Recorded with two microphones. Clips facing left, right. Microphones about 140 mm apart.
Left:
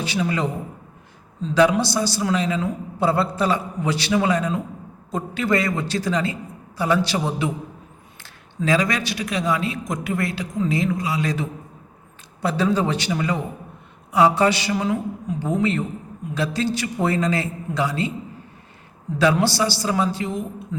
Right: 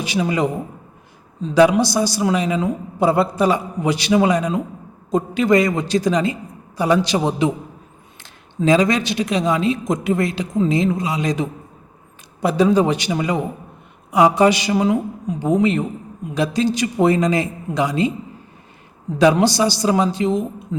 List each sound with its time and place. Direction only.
0.0 s a man's voice: 15° right (ahead or behind)
19.2 s a man's voice: 15° right (ahead or behind)